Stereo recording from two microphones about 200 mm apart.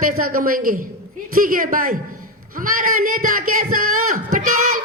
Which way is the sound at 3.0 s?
90° right.